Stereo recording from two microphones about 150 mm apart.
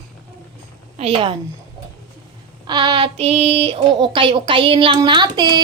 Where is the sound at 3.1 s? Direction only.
40° right (ahead or behind).